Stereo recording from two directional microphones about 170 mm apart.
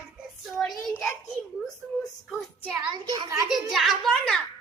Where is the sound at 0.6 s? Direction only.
Centre (ahead or behind).